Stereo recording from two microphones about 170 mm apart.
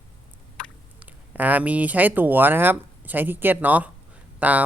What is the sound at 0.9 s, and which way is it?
Speech, 10° right (ahead or behind).